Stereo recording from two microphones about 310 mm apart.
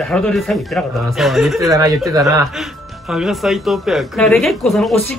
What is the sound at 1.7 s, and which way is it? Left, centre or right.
Speech, centre.